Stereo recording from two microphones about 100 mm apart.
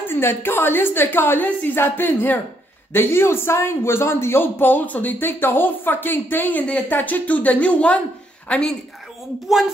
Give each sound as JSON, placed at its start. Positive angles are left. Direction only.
{"t": 0.0, "sound": "a man's voice", "side_deg": 20}
{"t": 9.5, "sound": "speech", "side_deg": 0}